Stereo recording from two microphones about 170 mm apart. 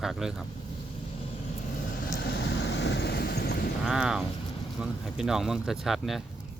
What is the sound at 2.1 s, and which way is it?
Vehicle, 80° left.